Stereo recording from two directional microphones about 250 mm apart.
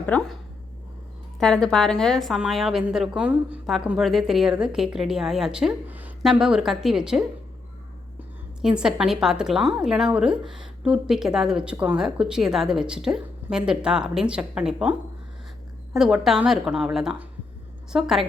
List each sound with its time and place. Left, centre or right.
0.0 s a woman's voice: centre
1.4 s a woman's voice: centre
8.6 s a woman's voice: centre